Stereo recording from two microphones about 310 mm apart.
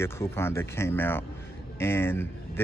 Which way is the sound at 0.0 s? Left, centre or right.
Centre.